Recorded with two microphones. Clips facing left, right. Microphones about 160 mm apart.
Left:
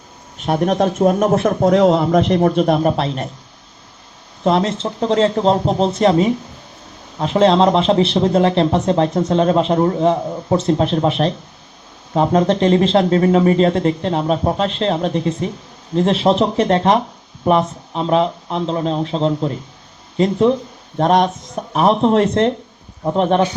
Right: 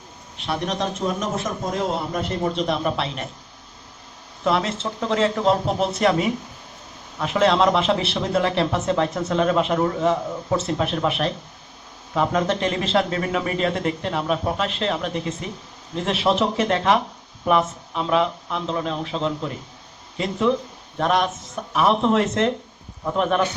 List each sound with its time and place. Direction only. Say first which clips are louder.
0.3 s speech: left 9 dB; 45° left (ahead or behind)
4.4 s a man's voice: left 6 dB; 35° left (ahead or behind)